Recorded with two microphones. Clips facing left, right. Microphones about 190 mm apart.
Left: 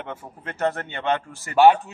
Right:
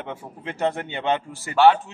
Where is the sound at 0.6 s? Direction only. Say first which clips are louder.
Even; 15° right (ahead or behind).